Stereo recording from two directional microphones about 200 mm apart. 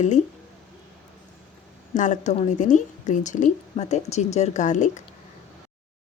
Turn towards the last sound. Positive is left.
turn(degrees=40)  # may be behind; listen again after turning